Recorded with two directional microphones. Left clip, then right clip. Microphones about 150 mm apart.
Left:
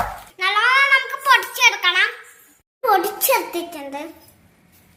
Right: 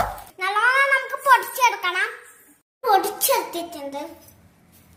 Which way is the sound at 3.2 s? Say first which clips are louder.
Left 3 dB; 55° left (ahead or behind).